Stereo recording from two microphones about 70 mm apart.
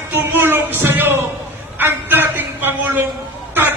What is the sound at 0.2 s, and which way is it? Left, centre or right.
Music, right.